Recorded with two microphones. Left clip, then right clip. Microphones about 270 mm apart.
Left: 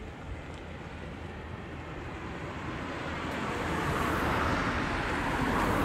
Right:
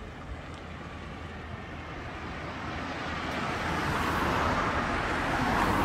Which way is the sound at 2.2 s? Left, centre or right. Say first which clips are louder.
Right 2 dB; centre.